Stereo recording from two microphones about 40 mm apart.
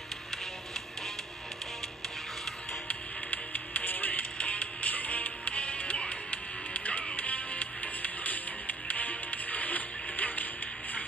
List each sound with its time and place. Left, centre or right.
2.9 s music: left